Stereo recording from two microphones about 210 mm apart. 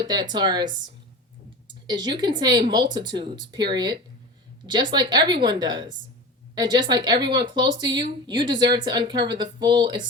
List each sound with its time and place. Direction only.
0.0 s speech: 20° right (ahead or behind)